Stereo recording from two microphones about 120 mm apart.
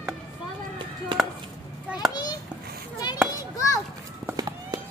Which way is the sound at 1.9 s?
5° right (ahead or behind).